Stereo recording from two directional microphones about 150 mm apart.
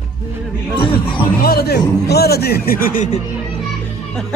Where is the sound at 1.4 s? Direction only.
90° left; by 3.2 s 60° left (ahead or behind).